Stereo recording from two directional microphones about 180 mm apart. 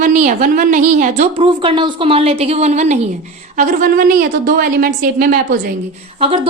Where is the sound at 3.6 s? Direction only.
50° right (ahead or behind).